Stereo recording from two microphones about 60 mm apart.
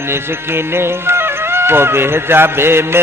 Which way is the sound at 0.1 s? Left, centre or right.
Right.